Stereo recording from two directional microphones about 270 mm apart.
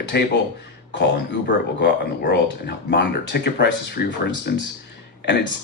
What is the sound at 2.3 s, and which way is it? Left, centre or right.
Speech, left.